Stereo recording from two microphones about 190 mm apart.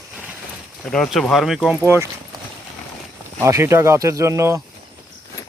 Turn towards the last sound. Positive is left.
turn(degrees=-15)  # may be behind; listen again after turning